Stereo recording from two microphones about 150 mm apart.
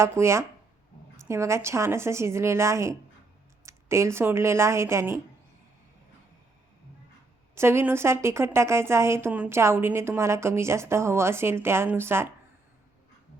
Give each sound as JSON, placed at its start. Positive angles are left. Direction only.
{"t": 0.0, "sound": "a woman's voice", "side_deg": -20}
{"t": 7.5, "sound": "a woman's voice", "side_deg": -15}